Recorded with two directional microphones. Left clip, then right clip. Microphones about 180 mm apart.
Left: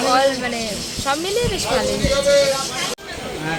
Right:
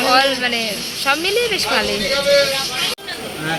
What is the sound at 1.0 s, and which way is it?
Speech, 15° left (ahead or behind).